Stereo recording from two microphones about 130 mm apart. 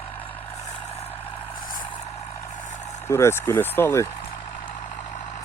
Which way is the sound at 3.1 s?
20° left (ahead or behind).